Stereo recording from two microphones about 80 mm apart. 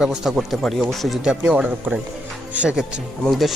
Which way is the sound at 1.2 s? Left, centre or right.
Centre.